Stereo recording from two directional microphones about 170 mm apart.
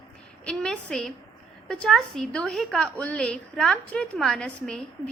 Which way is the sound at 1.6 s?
5° left (ahead or behind).